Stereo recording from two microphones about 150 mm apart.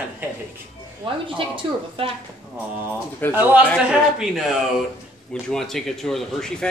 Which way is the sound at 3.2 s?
15° left (ahead or behind).